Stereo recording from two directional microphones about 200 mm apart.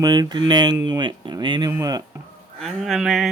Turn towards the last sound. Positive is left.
turn(degrees=0)  # may be behind; listen again after turning